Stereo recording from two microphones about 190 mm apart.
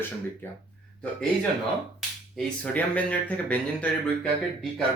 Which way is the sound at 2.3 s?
5° left (ahead or behind).